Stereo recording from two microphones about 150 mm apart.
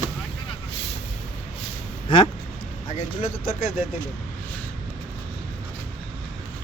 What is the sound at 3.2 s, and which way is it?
Speech, 65° left (ahead or behind).